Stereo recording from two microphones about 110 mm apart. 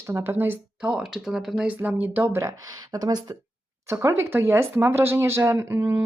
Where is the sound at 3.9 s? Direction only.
25° right (ahead or behind).